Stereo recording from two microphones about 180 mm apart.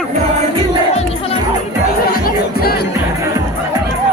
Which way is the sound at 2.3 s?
60° left (ahead or behind).